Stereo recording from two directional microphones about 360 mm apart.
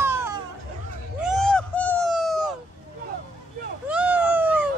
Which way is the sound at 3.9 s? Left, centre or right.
Centre.